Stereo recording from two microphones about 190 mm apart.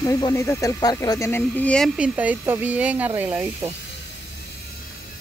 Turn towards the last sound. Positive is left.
turn(degrees=-10)  # may be behind; listen again after turning